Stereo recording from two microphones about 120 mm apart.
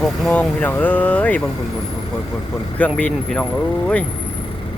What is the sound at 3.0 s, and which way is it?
Speech, 10° left (ahead or behind).